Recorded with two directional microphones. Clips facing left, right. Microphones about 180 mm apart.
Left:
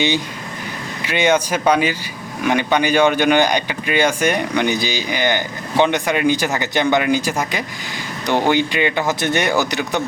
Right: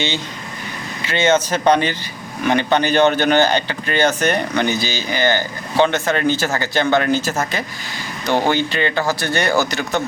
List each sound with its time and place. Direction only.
1.0 s speech: 15° left (ahead or behind)